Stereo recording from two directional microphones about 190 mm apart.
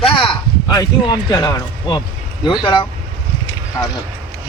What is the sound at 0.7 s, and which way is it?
Speech, 20° left (ahead or behind).